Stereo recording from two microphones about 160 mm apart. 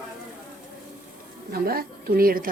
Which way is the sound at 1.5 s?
70° right (ahead or behind).